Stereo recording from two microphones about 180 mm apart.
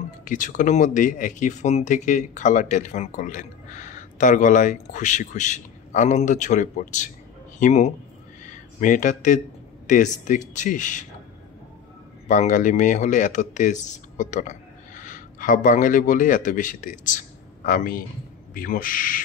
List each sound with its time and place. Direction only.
0.2 s a man's voice: 45° left (ahead or behind)
12.3 s speech: 45° left (ahead or behind)